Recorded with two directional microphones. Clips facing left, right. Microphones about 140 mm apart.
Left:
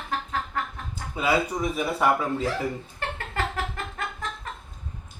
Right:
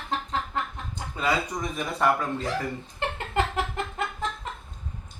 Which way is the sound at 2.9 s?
20° right (ahead or behind).